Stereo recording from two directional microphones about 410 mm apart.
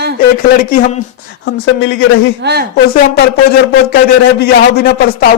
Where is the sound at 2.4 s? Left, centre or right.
Right.